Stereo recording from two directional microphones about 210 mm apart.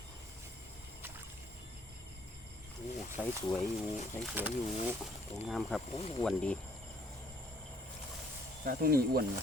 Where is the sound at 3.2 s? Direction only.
15° left (ahead or behind).